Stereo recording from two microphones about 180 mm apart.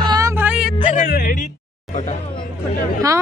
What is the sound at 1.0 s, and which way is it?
Music, 55° left (ahead or behind).